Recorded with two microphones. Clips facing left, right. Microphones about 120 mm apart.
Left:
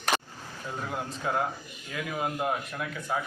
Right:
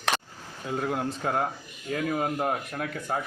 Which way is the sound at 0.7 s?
55° right (ahead or behind).